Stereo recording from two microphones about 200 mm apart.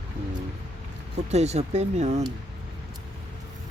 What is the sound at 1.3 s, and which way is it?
Speech, 35° right (ahead or behind).